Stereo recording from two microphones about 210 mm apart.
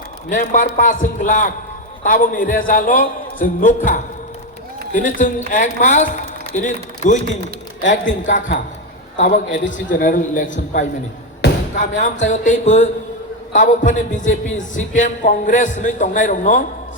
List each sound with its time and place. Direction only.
0.3 s a man's voice: 40° left (ahead or behind)
7.8 s a man's voice: 60° left (ahead or behind)
8.3 s a man's voice: 35° left (ahead or behind)
9.6 s a man's voice: 40° left (ahead or behind)